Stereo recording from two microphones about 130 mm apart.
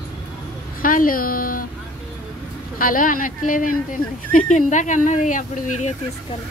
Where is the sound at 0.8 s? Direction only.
90° left.